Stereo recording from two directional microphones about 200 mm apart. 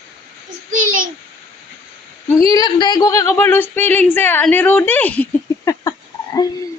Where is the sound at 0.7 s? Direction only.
45° right (ahead or behind).